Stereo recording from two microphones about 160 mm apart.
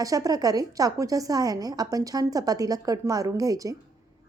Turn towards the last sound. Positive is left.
turn(degrees=-20)  # may be behind; listen again after turning